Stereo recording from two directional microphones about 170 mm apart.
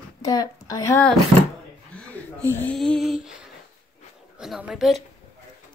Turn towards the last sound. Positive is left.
turn(degrees=0)  # may be behind; listen again after turning